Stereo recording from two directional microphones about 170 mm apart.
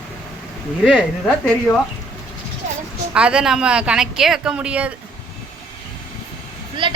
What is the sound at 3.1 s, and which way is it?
Speech, 5° right (ahead or behind).